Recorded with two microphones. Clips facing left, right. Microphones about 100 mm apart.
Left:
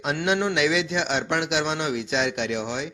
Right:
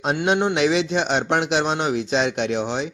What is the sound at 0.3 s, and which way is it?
Speech, 30° right (ahead or behind).